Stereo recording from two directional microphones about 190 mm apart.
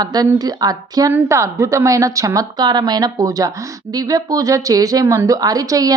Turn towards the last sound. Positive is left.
turn(degrees=-20)  # may be behind; listen again after turning